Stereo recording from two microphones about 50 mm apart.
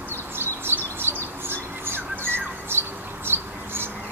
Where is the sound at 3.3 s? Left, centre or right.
Right.